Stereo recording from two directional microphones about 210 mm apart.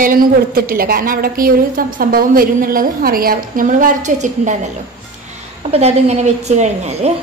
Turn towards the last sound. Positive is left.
turn(degrees=-30)  # may be behind; listen again after turning